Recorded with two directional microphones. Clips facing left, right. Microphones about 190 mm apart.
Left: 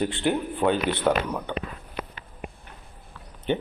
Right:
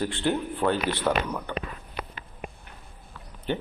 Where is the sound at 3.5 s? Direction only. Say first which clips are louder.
Left 3 dB; 20° left (ahead or behind).